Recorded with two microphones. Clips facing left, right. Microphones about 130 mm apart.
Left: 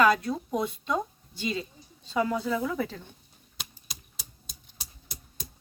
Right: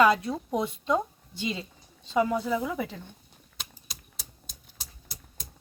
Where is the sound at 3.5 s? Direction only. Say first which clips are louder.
Even; centre (ahead or behind).